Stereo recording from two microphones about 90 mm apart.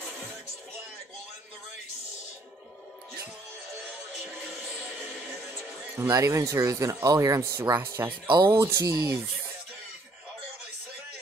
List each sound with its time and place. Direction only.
5.9 s speech: 30° right (ahead or behind)